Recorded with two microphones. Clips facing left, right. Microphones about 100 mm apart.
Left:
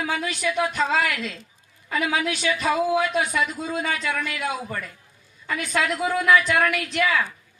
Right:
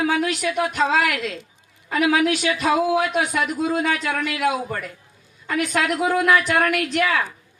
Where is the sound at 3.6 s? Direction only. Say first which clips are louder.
Right 5 dB; 65° right (ahead or behind).